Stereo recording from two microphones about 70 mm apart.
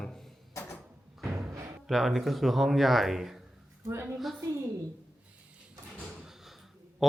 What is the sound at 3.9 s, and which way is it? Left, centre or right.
Speech, right.